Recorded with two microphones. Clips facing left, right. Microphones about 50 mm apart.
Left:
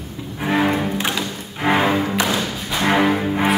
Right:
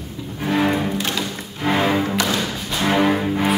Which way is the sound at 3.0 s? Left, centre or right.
Centre.